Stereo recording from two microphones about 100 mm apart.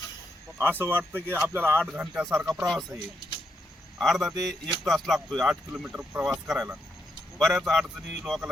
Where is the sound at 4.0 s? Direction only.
Centre (ahead or behind).